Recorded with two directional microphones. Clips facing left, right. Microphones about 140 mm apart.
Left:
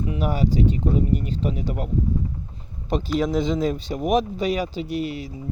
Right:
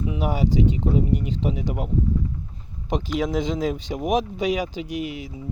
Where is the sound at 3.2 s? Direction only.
15° right (ahead or behind).